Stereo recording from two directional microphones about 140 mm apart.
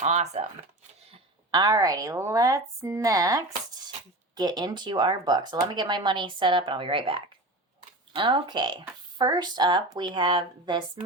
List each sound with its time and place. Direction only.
0.0 s speech: 55° right (ahead or behind)
1.5 s a woman's voice: 30° right (ahead or behind)